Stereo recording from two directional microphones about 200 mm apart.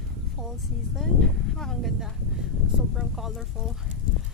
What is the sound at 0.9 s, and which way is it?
Speech, centre (ahead or behind).